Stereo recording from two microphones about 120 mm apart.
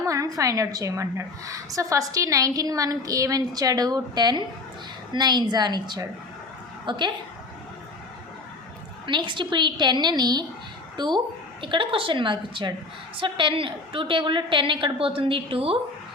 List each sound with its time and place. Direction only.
0.0 s a woman's voice: 30° right (ahead or behind)
9.0 s a woman's voice: 40° right (ahead or behind)